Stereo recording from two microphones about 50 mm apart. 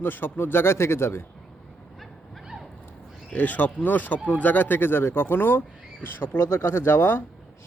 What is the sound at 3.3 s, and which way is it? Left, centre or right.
Speech, left.